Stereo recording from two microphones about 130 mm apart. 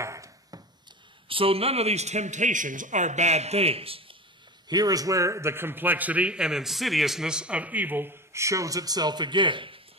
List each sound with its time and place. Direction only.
0.0 s a sound: 25° right (ahead or behind)
1.3 s a man's voice: 45° right (ahead or behind)
4.6 s a man's voice: 30° right (ahead or behind)